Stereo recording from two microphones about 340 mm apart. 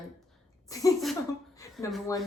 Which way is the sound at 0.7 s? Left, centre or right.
Centre.